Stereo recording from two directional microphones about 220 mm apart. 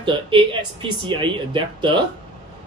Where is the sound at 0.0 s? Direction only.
20° right (ahead or behind).